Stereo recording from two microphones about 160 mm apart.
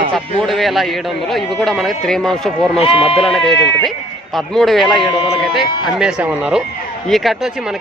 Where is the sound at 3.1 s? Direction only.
Centre (ahead or behind).